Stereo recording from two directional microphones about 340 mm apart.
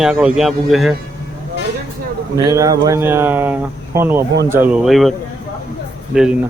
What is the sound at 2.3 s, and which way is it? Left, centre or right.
Speech, centre.